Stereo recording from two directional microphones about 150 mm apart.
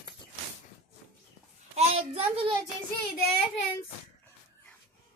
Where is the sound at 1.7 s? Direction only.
45° right (ahead or behind).